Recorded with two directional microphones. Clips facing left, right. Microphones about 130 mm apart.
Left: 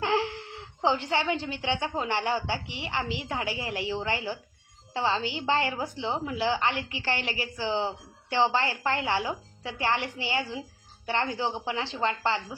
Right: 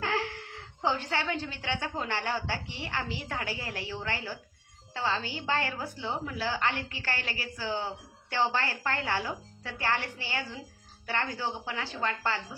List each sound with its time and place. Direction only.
0.0 s a woman's voice: 20° left (ahead or behind)